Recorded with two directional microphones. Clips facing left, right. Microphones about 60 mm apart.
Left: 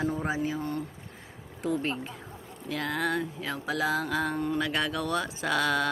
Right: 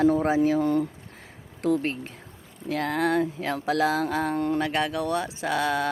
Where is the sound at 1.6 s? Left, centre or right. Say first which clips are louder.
Right 5 dB; right.